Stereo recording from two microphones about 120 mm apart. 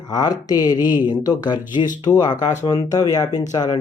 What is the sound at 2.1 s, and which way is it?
Speech, 30° left (ahead or behind).